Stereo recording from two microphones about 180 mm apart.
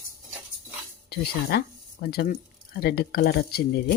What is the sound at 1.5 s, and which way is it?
Speech, 65° left (ahead or behind).